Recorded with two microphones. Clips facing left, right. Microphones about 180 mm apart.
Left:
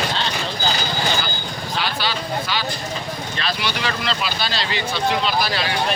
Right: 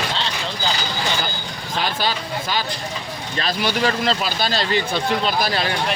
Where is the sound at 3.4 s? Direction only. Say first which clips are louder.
Right 6 dB; 40° right (ahead or behind).